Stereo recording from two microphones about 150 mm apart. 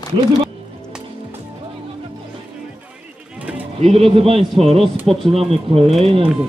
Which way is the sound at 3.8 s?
40° right (ahead or behind).